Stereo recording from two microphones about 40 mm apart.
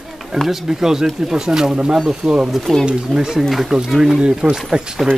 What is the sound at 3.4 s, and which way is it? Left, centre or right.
Speech, centre.